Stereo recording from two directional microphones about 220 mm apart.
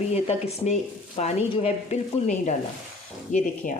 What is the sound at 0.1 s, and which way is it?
Speech, 30° left (ahead or behind).